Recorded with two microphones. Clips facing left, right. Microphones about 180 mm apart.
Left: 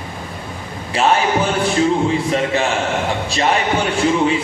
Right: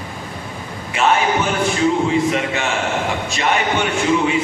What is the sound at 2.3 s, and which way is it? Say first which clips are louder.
A man's voice: left 3 dB; 35° left (ahead or behind).